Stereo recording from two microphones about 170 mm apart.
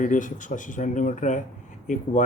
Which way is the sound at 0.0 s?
50° left (ahead or behind).